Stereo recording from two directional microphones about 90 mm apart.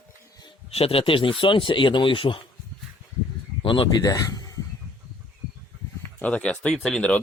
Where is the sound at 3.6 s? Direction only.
70° left (ahead or behind).